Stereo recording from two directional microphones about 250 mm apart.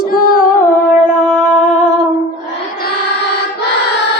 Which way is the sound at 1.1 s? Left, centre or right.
Left.